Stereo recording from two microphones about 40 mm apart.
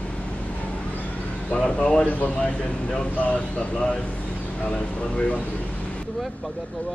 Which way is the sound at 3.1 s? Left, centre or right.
Left.